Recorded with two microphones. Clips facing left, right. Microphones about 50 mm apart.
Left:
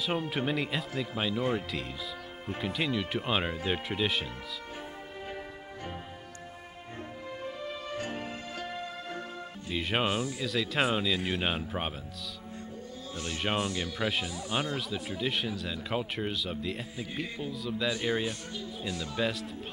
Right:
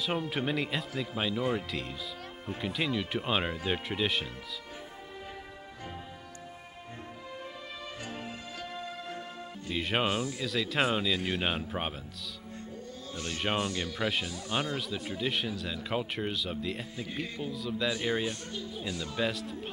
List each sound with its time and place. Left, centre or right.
0.3 s speech: centre
8.0 s music: left
9.7 s speech: centre
13.3 s speech: centre